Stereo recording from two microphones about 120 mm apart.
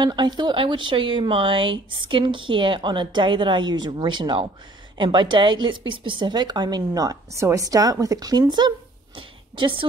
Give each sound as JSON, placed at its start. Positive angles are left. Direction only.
{"t": 0.0, "sound": "a woman's voice", "side_deg": -40}